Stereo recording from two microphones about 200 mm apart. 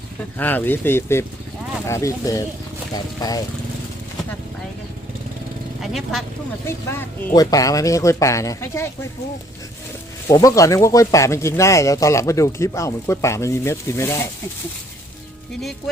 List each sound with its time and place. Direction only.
0.3 s speech: 10° left (ahead or behind)
5.8 s speech: centre (ahead or behind)
6.7 s speech: 15° left (ahead or behind)
10.2 s speech: 15° left (ahead or behind)